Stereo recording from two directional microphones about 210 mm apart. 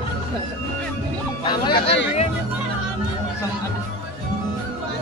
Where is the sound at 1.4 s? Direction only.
20° left (ahead or behind).